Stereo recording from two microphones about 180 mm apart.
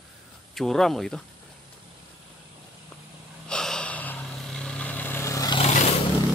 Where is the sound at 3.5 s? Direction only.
5° left (ahead or behind).